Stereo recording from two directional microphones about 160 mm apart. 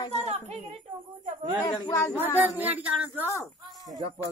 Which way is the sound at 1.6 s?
20° left (ahead or behind).